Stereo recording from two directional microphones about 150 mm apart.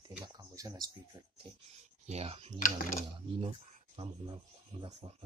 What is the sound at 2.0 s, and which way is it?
Speech, 40° right (ahead or behind).